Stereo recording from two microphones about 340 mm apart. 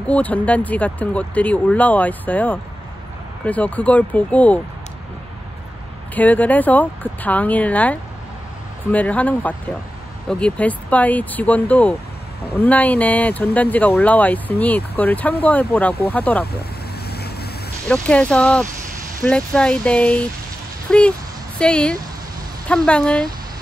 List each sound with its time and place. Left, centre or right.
0.0 s speech: centre
6.1 s speech: centre
17.1 s vehicle: left
17.8 s speech: centre